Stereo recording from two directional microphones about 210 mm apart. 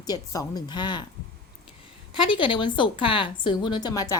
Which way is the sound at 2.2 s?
25° left (ahead or behind).